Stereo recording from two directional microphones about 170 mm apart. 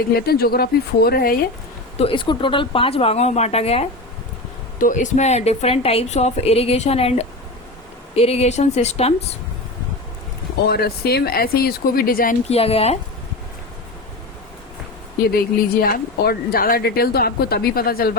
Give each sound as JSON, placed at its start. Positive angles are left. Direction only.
{"t": 0.1, "sound": "speech", "side_deg": 65}
{"t": 2.0, "sound": "a woman's voice", "side_deg": 30}
{"t": 4.8, "sound": "a woman's voice", "side_deg": 50}
{"t": 10.7, "sound": "speech", "side_deg": 65}
{"t": 12.5, "sound": "a woman's voice", "side_deg": 35}
{"t": 15.4, "sound": "speech", "side_deg": 60}